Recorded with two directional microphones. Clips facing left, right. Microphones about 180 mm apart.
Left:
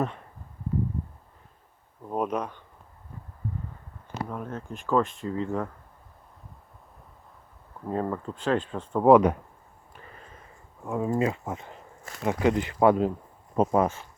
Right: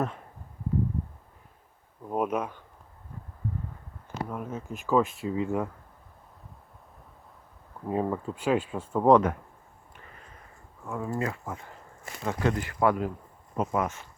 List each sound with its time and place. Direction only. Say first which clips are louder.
2.0 s speech: even; 5° right (ahead or behind)
4.3 s speech: even; 5° right (ahead or behind)
7.9 s speech: right 1 dB; 10° right (ahead or behind)
9.0 s speech: left 3 dB; 10° left (ahead or behind)
10.8 s speech: left 5 dB; 20° left (ahead or behind)